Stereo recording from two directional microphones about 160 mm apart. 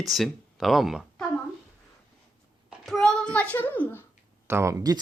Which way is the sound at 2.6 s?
Centre (ahead or behind).